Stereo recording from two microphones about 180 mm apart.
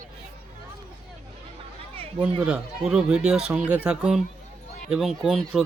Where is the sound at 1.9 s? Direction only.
30° right (ahead or behind).